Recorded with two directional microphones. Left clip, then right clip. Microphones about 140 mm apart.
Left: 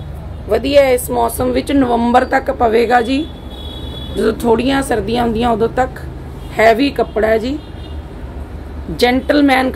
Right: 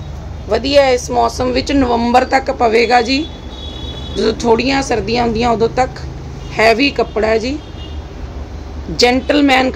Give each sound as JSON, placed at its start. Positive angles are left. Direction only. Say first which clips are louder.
{"t": 0.5, "sound": "speech", "louder": "even", "side_deg": 10}
{"t": 8.9, "sound": "a woman's voice", "louder": "right 1 dB", "side_deg": 5}